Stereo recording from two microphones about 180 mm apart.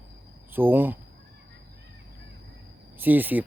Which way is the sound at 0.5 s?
10° right (ahead or behind).